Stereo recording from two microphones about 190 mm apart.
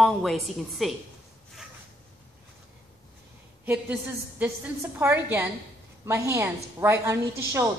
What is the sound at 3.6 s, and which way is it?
A woman's voice, 10° right (ahead or behind).